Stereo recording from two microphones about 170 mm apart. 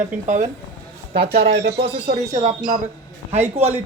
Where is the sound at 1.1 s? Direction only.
70° right (ahead or behind).